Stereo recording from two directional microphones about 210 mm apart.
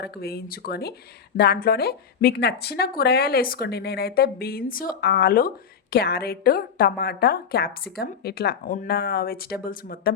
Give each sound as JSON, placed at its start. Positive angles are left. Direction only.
{"t": 0.0, "sound": "a woman's voice", "side_deg": 50}